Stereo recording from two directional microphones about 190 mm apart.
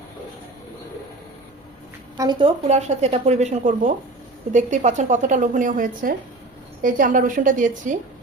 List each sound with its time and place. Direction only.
2.1 s a woman's voice: 20° right (ahead or behind)
2.6 s a woman's voice: 35° right (ahead or behind)